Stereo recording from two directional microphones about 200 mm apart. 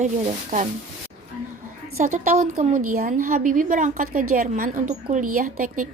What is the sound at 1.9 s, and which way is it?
A woman's voice, 40° right (ahead or behind).